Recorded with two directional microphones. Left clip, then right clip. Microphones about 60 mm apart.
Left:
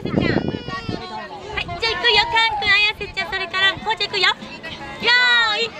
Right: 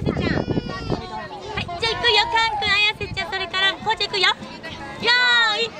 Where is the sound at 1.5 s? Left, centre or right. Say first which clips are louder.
Left 2 dB; right.